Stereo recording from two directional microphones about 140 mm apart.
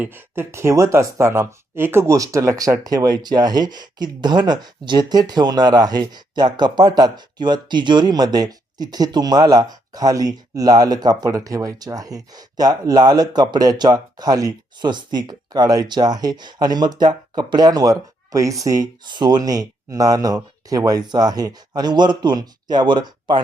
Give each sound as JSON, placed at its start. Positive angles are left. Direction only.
{"t": 0.0, "sound": "speech", "side_deg": -15}